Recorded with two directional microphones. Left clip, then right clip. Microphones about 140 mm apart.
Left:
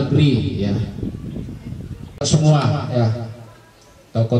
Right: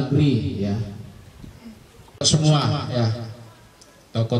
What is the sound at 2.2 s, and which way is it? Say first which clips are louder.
Speech: left 2 dB; 35° right (ahead or behind).